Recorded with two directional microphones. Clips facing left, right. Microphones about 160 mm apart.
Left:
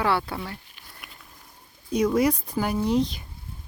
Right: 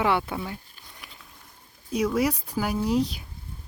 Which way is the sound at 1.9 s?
5° right (ahead or behind).